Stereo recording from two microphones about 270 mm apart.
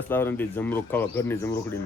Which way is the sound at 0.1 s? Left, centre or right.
Centre.